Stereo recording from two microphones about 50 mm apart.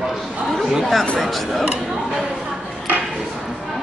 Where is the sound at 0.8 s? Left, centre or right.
Centre.